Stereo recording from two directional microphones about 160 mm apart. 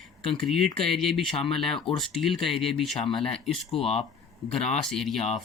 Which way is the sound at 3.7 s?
40° left (ahead or behind).